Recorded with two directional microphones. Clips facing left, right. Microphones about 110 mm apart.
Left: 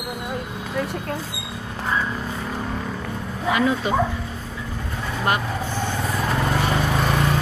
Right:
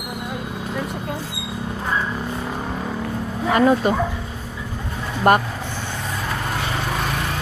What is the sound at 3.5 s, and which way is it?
Speech, 45° right (ahead or behind).